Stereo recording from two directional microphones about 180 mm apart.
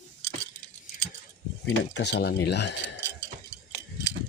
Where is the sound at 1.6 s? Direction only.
70° left (ahead or behind).